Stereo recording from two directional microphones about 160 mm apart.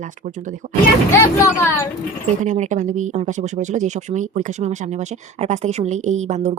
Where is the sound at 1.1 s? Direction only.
15° left (ahead or behind).